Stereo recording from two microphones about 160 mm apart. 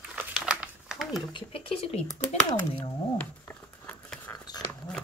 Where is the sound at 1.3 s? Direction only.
35° left (ahead or behind).